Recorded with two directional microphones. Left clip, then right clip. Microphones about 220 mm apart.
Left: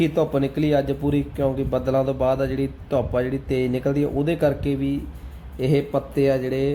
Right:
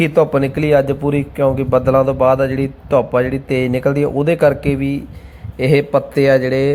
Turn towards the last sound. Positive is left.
turn(degrees=-20)  # may be behind; listen again after turning